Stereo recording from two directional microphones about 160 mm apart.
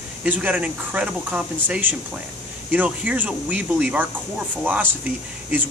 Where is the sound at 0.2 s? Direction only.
10° right (ahead or behind).